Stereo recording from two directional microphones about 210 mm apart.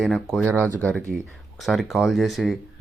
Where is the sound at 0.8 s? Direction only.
5° left (ahead or behind).